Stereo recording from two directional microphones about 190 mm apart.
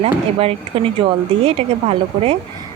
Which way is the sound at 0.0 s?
30° right (ahead or behind).